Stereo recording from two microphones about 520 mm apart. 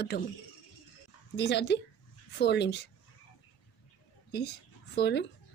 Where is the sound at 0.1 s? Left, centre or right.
Centre.